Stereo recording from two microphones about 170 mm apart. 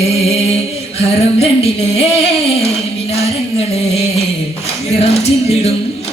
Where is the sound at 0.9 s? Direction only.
35° left (ahead or behind).